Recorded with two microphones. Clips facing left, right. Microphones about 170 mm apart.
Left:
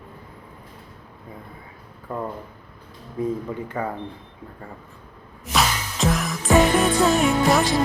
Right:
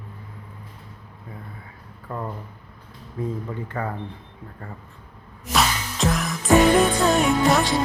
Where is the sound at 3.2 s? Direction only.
15° left (ahead or behind).